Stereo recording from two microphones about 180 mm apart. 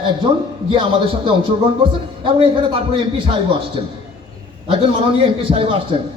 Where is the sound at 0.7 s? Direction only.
30° right (ahead or behind).